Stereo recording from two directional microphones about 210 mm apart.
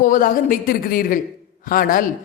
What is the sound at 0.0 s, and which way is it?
A man's voice, 40° left (ahead or behind).